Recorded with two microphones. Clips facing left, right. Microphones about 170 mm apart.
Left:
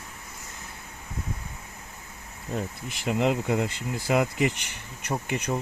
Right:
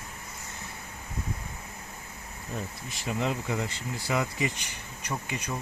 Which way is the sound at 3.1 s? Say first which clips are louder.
Left 6 dB; 70° left (ahead or behind).